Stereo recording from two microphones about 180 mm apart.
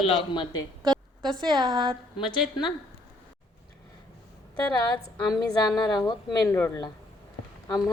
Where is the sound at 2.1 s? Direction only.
25° left (ahead or behind).